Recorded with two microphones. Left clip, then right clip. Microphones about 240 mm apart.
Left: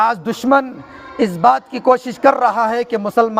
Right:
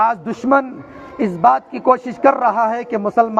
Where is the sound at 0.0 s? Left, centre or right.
Left.